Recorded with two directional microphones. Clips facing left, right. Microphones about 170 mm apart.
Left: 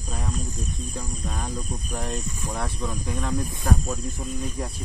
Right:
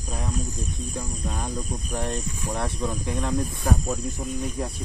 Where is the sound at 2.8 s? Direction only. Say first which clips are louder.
Right 2 dB; 15° right (ahead or behind).